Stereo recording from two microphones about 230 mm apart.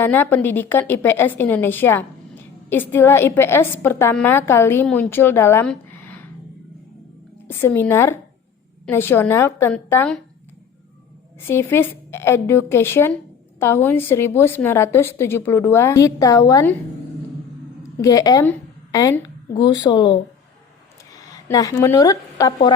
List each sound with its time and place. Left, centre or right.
0.0 s a woman's voice: centre
7.4 s a woman's voice: centre
11.4 s a woman's voice: centre
18.0 s a woman's voice: centre